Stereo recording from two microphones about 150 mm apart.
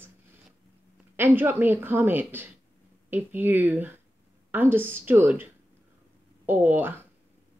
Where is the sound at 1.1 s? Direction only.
15° right (ahead or behind).